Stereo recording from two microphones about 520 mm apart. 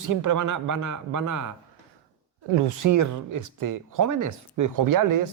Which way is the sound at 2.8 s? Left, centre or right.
Right.